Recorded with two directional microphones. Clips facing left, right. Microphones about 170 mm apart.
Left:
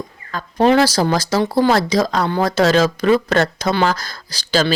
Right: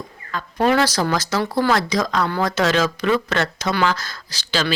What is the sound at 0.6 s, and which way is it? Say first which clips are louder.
Speech: left 4 dB; 30° left (ahead or behind).